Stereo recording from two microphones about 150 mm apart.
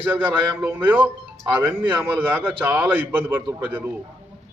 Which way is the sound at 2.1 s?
10° right (ahead or behind).